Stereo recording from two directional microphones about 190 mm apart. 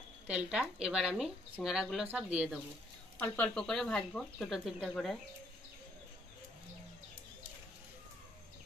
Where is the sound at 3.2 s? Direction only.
5° left (ahead or behind).